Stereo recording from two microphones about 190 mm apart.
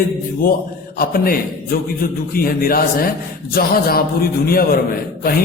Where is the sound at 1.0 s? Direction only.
50° left (ahead or behind).